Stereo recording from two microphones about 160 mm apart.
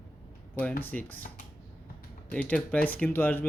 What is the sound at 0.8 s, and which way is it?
Speech, 10° left (ahead or behind).